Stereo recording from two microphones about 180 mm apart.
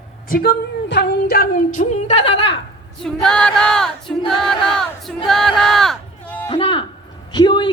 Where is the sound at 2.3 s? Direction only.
80° left.